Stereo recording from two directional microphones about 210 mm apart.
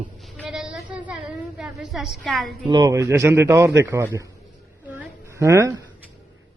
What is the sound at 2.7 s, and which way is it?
A man's voice, 20° right (ahead or behind).